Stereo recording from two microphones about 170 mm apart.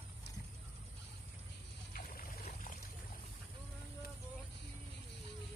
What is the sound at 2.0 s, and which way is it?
Boat, 55° left (ahead or behind).